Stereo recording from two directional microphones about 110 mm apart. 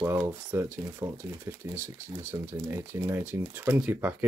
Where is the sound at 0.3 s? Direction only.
20° right (ahead or behind).